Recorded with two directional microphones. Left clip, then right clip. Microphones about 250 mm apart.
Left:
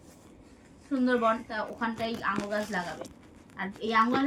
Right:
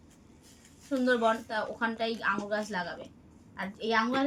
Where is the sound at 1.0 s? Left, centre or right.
Centre.